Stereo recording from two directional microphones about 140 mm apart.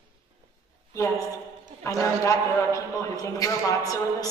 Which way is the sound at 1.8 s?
20° left (ahead or behind).